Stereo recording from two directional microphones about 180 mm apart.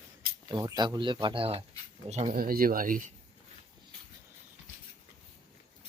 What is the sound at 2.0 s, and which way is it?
Speech, 40° right (ahead or behind).